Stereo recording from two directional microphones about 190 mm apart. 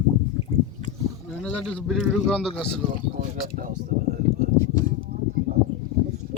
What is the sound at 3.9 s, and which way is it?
Speech, 40° right (ahead or behind).